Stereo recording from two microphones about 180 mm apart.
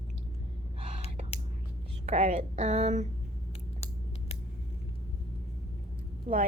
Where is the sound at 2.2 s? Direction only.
45° right (ahead or behind).